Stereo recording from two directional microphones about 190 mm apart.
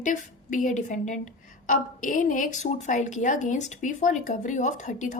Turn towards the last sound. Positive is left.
turn(degrees=40)  # may be behind; listen again after turning